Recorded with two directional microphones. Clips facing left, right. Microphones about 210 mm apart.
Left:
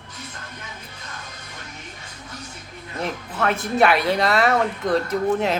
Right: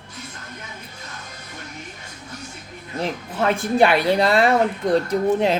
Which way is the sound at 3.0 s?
30° right (ahead or behind).